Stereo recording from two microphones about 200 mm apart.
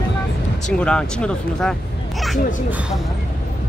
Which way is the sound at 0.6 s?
5° left (ahead or behind).